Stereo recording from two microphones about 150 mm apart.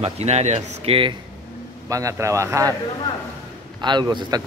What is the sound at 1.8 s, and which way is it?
Speech, 20° right (ahead or behind).